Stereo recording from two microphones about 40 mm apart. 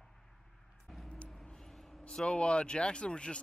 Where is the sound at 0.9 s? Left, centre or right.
Centre.